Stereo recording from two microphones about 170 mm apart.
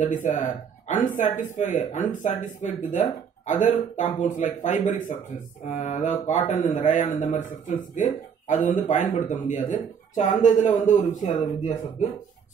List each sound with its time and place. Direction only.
0.0 s speech: 45° left (ahead or behind)